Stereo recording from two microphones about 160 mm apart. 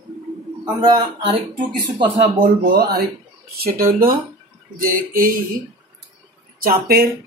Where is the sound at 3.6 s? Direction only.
65° right (ahead or behind).